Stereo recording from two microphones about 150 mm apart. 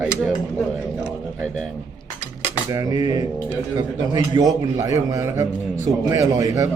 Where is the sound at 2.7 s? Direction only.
25° right (ahead or behind).